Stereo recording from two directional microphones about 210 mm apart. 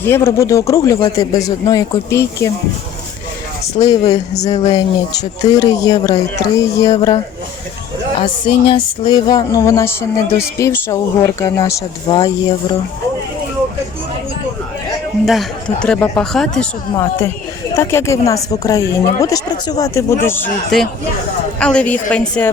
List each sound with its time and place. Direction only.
0.0 s a woman's voice: 10° left (ahead or behind)
3.8 s a woman's voice: 20° left (ahead or behind)
8.2 s a woman's voice: 25° left (ahead or behind)
15.3 s a woman's voice: centre (ahead or behind)